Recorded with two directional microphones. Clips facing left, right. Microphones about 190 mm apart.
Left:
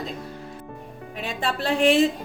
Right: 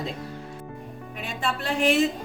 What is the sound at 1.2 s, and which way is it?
Speech, 35° left (ahead or behind).